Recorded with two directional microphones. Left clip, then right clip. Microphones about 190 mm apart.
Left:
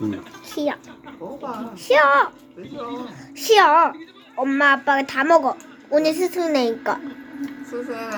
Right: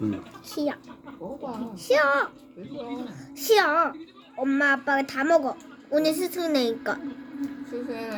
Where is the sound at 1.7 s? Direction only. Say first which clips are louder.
Left 6 dB; 10° right (ahead or behind).